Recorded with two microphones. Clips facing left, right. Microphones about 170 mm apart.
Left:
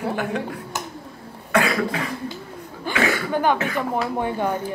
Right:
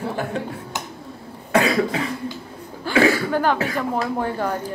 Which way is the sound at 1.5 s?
30° right (ahead or behind).